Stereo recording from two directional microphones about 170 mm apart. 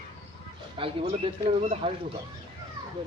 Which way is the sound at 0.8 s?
35° right (ahead or behind).